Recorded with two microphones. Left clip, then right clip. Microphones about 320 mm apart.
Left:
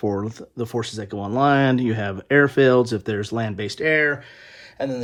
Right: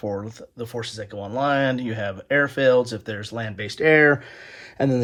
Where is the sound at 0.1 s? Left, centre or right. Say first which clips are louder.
Left 3 dB; left.